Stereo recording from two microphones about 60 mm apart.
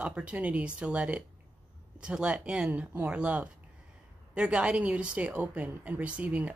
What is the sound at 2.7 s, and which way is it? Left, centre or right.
A woman's voice, right.